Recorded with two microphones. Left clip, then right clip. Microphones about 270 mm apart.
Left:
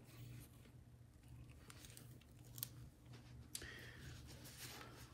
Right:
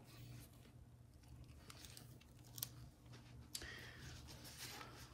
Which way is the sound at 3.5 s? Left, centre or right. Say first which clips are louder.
Right 2 dB; centre.